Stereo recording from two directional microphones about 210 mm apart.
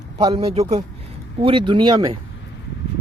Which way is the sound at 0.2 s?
25° right (ahead or behind).